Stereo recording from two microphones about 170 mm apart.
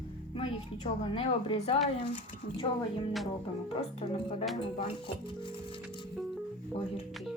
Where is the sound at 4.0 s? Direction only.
35° left (ahead or behind).